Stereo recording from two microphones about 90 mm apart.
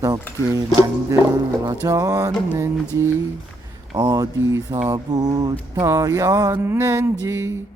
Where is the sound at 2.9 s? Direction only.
35° right (ahead or behind).